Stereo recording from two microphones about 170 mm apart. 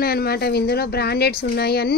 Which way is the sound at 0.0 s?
65° left (ahead or behind).